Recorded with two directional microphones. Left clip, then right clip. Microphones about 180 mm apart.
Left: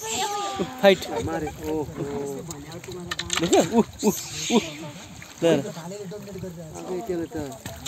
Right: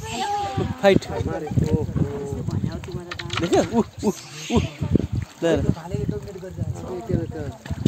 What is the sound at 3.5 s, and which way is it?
Speech, 15° left (ahead or behind).